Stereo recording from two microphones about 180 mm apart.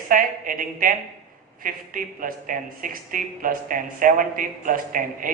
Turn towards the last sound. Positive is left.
turn(degrees=-50)  # may be behind; listen again after turning